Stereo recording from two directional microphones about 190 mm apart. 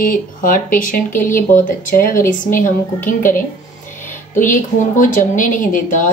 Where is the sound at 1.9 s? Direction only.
50° left (ahead or behind).